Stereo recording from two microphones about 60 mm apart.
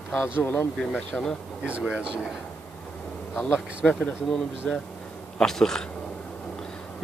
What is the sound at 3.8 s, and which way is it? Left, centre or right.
Speech, left.